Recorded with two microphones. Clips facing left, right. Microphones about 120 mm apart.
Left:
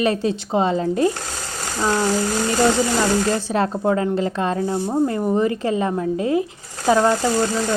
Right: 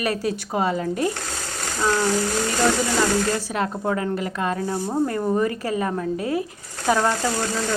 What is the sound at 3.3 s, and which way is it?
Speech, 35° left (ahead or behind).